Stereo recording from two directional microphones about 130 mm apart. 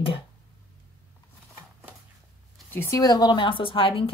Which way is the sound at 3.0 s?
30° left (ahead or behind).